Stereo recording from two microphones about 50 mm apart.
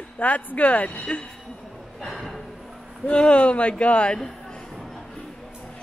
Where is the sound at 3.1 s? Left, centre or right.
Left.